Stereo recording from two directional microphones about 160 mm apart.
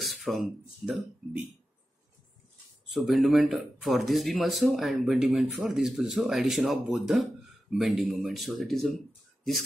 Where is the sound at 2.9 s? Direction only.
Centre (ahead or behind).